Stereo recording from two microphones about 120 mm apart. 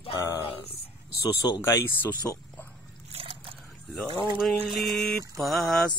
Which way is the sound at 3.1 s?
55° right (ahead or behind).